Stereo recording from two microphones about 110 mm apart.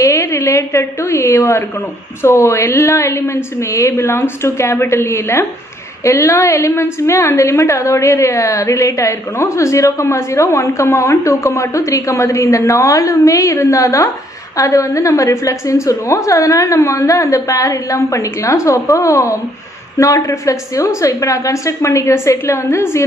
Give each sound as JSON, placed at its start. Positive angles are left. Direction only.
{"t": 0.0, "sound": "a woman's voice", "side_deg": 25}